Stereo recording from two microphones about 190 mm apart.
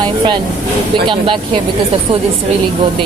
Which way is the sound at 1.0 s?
25° right (ahead or behind).